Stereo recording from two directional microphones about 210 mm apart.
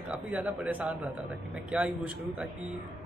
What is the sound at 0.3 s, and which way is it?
A man's voice, 5° right (ahead or behind).